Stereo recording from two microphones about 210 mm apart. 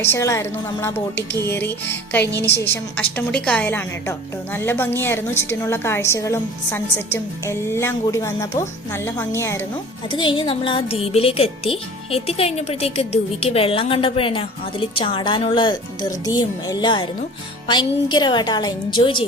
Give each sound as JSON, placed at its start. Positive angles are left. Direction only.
{"t": 0.0, "sound": "a woman's voice", "side_deg": 15}
{"t": 10.1, "sound": "a woman's voice", "side_deg": 25}